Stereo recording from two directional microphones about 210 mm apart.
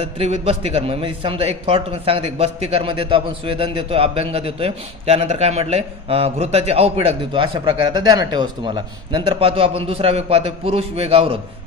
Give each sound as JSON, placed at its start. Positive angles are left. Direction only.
{"t": 0.0, "sound": "a man's voice", "side_deg": -30}